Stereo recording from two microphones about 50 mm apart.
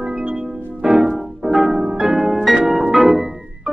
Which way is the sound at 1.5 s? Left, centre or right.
Centre.